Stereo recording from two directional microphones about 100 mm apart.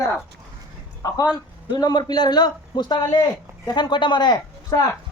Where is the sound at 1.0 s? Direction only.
35° left (ahead or behind).